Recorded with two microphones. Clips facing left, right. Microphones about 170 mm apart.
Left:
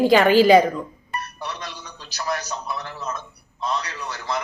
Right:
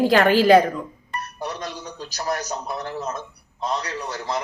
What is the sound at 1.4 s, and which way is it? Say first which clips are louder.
A man's voice: right 3 dB; 45° right (ahead or behind).